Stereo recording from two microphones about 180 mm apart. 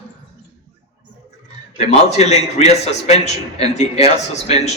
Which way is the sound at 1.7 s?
35° left (ahead or behind).